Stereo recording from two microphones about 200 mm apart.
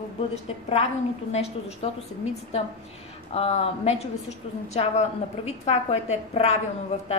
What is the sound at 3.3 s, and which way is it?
A woman's voice, 30° left (ahead or behind).